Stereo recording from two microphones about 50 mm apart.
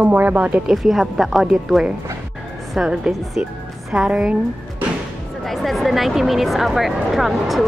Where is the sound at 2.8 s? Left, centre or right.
Centre.